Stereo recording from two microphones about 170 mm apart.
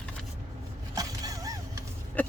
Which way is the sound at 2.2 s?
10° left (ahead or behind).